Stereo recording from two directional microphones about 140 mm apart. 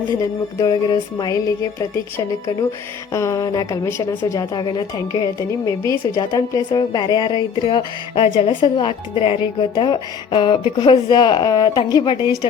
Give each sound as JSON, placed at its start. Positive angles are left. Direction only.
{"t": 0.6, "sound": "music", "side_deg": 30}
{"t": 3.1, "sound": "a woman's voice", "side_deg": 20}